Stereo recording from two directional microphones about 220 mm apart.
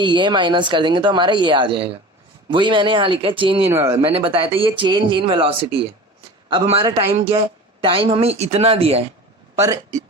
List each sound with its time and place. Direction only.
0.0 s speech: 20° right (ahead or behind)
3.7 s a man's voice: 10° right (ahead or behind)
4.1 s speech: 25° right (ahead or behind)
9.6 s a man's voice: 15° right (ahead or behind)